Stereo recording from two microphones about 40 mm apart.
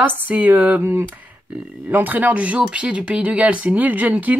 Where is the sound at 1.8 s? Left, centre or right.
Right.